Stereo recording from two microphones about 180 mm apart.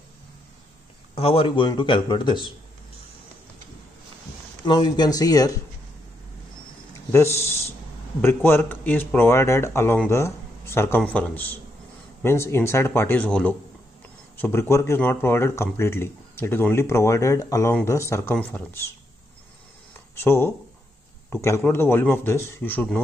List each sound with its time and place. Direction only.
1.1 s speech: 30° left (ahead or behind)
4.6 s speech: 25° left (ahead or behind)
7.1 s speech: 15° left (ahead or behind)
20.2 s speech: 15° left (ahead or behind)